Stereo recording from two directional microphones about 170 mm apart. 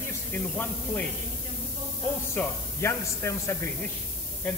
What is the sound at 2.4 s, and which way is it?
A man's voice, 15° left (ahead or behind).